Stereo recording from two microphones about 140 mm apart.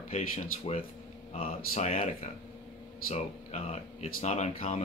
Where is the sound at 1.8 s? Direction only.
45° left (ahead or behind).